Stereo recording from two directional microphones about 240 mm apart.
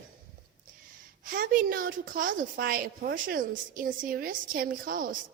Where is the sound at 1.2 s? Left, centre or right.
Right.